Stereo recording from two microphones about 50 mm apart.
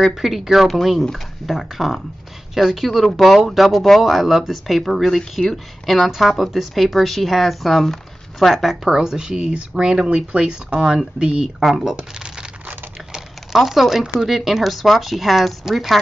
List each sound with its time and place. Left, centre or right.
0.0 s speech: centre
8.5 s speech: centre
11.6 s speech: centre
13.1 s a sound: centre
14.0 s speech: centre